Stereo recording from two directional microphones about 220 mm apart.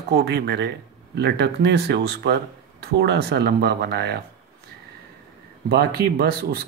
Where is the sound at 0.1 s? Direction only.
50° right (ahead or behind).